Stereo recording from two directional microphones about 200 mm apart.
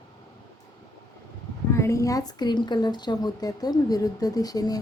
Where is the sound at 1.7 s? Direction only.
15° left (ahead or behind).